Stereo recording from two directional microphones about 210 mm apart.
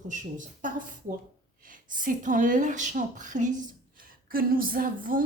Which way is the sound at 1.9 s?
40° right (ahead or behind).